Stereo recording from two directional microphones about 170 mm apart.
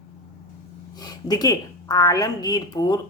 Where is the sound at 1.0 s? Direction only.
25° left (ahead or behind).